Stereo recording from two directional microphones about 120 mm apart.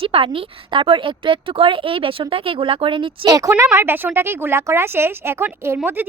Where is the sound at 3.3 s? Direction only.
25° right (ahead or behind).